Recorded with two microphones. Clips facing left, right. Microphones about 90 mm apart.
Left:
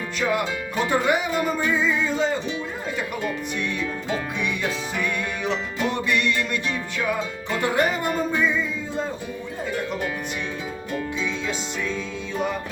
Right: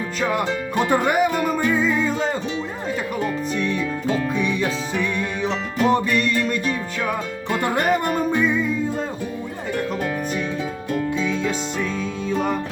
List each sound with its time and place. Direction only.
0.9 s music: 45° right (ahead or behind)
3.6 s music: 35° right (ahead or behind)
7.5 s music: 50° right (ahead or behind)
11.2 s music: 50° right (ahead or behind)